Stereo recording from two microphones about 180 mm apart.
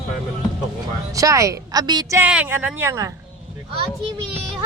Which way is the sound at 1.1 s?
20° right (ahead or behind).